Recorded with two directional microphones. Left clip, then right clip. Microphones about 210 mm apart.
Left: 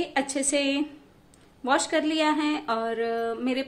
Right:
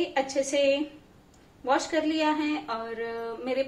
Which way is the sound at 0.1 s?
50° left (ahead or behind).